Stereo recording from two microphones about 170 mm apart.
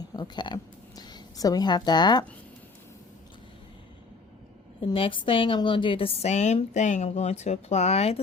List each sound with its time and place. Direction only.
0.1 s speech: 25° left (ahead or behind)
4.8 s a woman's voice: 30° left (ahead or behind)